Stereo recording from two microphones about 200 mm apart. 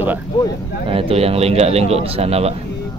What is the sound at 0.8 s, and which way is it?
Speech, 30° right (ahead or behind).